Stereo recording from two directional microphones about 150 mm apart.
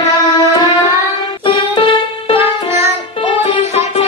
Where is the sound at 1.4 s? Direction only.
35° left (ahead or behind).